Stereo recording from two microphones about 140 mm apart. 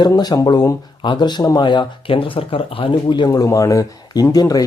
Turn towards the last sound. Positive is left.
turn(degrees=25)  # may be behind; listen again after turning